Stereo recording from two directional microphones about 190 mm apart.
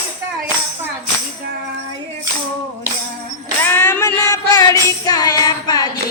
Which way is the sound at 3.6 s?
10° left (ahead or behind).